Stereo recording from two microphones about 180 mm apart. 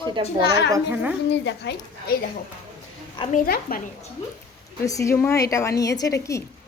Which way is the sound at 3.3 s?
50° left (ahead or behind).